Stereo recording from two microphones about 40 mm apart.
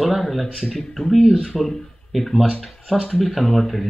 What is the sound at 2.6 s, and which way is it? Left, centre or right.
Speech, centre.